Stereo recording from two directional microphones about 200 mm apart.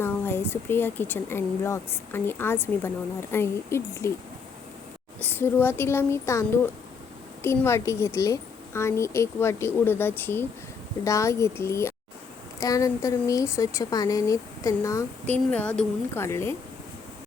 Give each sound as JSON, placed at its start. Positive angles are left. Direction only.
{"t": 0.0, "sound": "speech", "side_deg": 10}
{"t": 5.2, "sound": "speech", "side_deg": 10}